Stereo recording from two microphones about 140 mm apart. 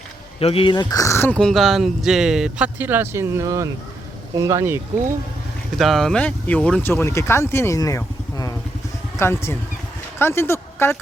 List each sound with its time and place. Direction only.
0.3 s speech: 45° left (ahead or behind); by 1.4 s 20° left (ahead or behind)
1.4 s speech: centre (ahead or behind); by 4.8 s 20° right (ahead or behind)
5.7 s a woman's voice: centre (ahead or behind); by 10.9 s 15° left (ahead or behind)